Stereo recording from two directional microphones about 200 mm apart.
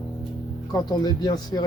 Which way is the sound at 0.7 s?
20° left (ahead or behind).